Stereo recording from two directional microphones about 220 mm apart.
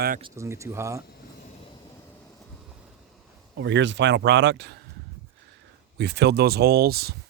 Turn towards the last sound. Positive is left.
turn(degrees=-45)  # may be behind; listen again after turning